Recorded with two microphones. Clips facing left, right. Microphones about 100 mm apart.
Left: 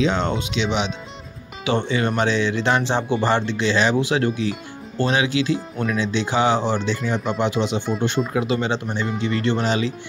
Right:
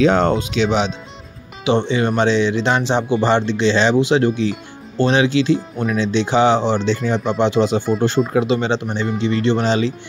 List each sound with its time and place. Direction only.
0.0 s speech: 50° right (ahead or behind)
1.6 s speech: 20° right (ahead or behind)